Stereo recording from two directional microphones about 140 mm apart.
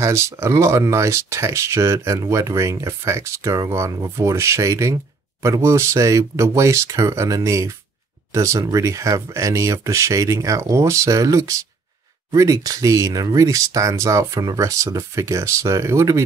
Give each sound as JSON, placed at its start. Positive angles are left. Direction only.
{"t": 0.0, "sound": "speech", "side_deg": -20}